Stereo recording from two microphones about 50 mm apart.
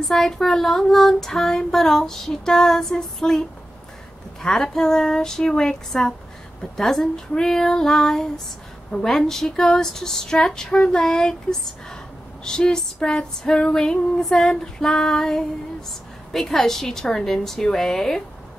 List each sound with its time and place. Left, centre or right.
0.1 s child singing: centre
12.4 s child singing: centre